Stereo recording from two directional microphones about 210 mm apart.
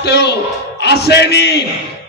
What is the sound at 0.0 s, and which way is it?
Speech, 55° left (ahead or behind).